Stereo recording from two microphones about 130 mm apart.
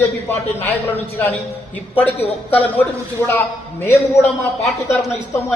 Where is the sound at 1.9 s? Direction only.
15° left (ahead or behind).